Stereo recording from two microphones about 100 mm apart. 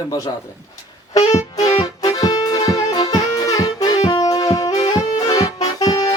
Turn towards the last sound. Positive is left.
turn(degrees=40)  # may be behind; listen again after turning